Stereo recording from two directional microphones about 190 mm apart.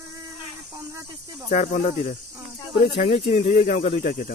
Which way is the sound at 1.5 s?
45° left (ahead or behind).